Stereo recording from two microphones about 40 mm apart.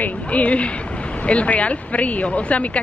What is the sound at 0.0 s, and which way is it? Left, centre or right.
Speech, left.